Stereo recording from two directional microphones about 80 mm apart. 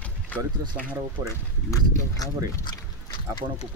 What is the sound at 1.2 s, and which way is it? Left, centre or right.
Speech, left.